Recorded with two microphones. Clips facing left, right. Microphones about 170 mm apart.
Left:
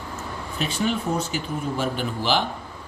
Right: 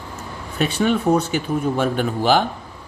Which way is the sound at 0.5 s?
55° right (ahead or behind).